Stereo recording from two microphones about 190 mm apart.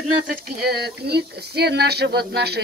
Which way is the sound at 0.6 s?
60° right (ahead or behind).